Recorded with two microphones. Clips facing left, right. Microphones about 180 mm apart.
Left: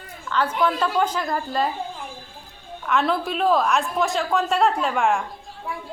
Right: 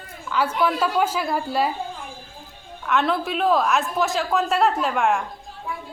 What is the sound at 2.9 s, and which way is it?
A woman's voice, centre (ahead or behind).